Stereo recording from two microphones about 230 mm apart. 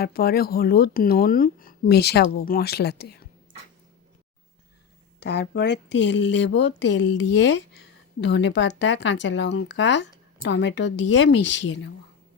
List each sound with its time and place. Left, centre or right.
0.0 s speech: left
5.2 s speech: left